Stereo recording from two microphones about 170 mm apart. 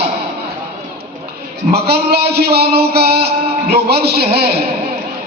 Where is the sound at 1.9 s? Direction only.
70° right (ahead or behind).